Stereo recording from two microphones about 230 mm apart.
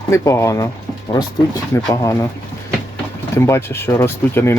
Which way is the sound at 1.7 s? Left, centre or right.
Centre.